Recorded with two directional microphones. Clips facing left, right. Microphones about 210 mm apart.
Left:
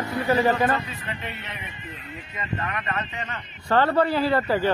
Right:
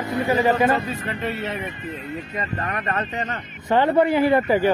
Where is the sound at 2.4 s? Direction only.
40° right (ahead or behind).